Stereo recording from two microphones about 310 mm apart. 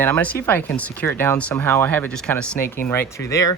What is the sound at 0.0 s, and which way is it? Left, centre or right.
Speech, centre.